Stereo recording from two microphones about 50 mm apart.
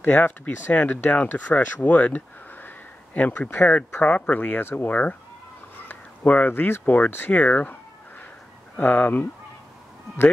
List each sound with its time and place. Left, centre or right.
0.0 s speech: left
6.2 s speech: left
6.5 s speech: left
7.3 s speech: left
8.7 s speech: left